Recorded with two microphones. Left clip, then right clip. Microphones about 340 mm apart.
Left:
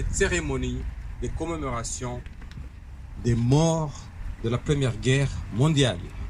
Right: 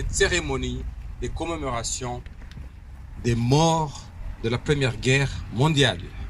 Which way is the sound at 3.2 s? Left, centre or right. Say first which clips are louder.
Right 3 dB; right.